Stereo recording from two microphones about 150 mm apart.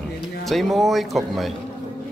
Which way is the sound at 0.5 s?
Centre (ahead or behind).